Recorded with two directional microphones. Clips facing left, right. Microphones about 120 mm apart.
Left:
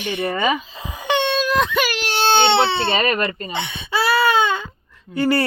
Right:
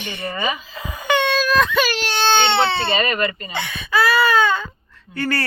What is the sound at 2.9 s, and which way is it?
Speech, 50° left (ahead or behind).